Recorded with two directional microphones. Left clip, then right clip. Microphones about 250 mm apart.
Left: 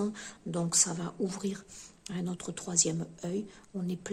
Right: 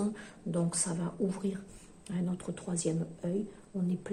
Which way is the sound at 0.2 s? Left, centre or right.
Left.